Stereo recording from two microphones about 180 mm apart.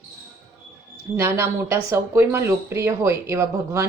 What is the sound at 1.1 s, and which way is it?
A woman's voice, 15° right (ahead or behind).